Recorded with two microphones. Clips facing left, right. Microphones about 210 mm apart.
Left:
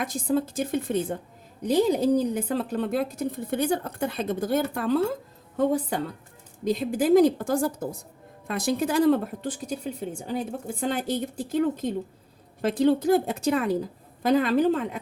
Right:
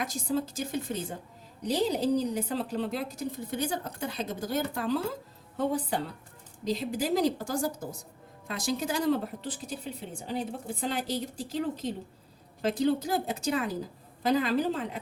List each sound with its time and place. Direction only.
0.0 s a woman's voice: 55° left (ahead or behind)
6.7 s a woman's voice: 50° left (ahead or behind)